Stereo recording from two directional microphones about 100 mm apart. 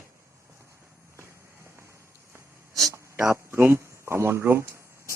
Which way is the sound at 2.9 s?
30° right (ahead or behind).